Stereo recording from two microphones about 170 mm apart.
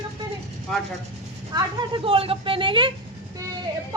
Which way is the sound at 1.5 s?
25° right (ahead or behind).